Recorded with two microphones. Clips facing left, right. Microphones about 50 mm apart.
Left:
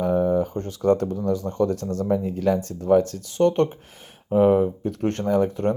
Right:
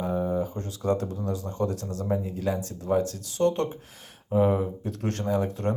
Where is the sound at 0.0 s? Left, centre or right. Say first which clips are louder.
Left 6 dB; left.